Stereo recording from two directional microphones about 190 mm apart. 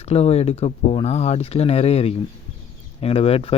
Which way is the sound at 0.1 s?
35° left (ahead or behind).